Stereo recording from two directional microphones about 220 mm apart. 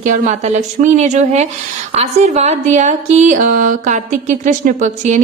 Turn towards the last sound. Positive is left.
turn(degrees=-35)  # may be behind; listen again after turning